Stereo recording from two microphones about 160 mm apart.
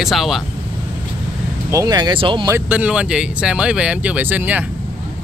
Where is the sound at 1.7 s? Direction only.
25° right (ahead or behind).